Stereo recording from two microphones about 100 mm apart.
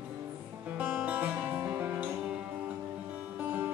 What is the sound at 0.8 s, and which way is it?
Music, 10° right (ahead or behind).